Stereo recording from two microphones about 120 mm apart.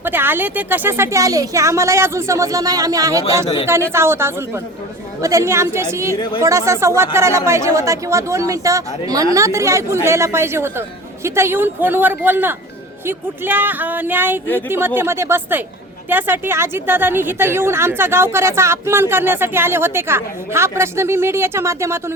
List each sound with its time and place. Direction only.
0.0 s a woman's voice: 15° right (ahead or behind)